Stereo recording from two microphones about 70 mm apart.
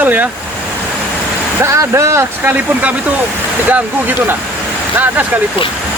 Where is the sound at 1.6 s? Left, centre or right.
Right.